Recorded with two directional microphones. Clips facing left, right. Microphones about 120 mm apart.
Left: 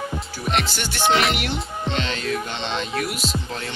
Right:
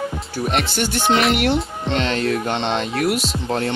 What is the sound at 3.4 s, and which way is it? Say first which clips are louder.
Music: right 9 dB; 55° right (ahead or behind).